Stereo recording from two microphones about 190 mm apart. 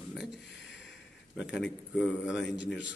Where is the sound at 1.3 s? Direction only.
Centre (ahead or behind).